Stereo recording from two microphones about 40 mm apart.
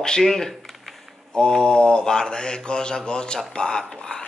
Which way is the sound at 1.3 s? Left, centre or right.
Centre.